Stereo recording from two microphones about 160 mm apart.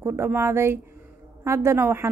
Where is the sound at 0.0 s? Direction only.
15° right (ahead or behind).